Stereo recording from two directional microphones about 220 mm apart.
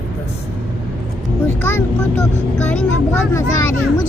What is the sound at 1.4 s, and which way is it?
Vehicle, 10° left (ahead or behind).